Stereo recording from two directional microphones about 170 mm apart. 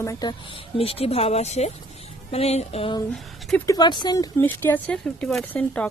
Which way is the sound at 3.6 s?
25° left (ahead or behind).